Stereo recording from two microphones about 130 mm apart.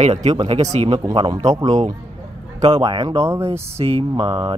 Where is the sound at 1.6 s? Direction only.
60° right (ahead or behind).